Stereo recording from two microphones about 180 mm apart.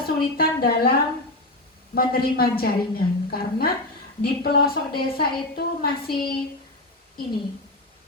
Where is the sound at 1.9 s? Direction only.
55° left (ahead or behind).